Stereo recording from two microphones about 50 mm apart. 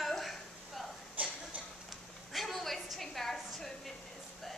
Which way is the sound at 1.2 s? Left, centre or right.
Right.